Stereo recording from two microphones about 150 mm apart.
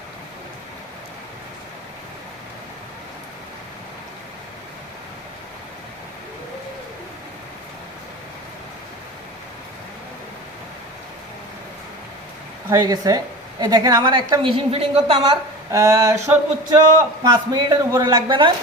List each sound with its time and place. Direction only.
12.7 s a woman's voice: 25° right (ahead or behind); by 15.4 s 40° right (ahead or behind)
15.7 s a woman's voice: 20° right (ahead or behind)